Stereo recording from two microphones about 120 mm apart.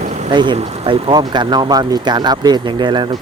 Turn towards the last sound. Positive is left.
turn(degrees=-40)  # may be behind; listen again after turning